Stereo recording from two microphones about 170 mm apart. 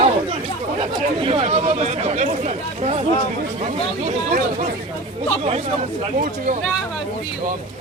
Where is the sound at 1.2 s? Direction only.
35° right (ahead or behind).